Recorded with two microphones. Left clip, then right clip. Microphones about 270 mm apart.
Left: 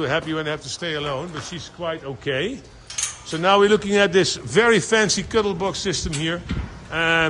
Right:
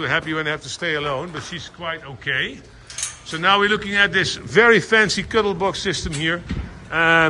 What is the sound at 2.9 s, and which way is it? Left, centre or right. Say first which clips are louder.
Cutlery: left 1 dB; centre.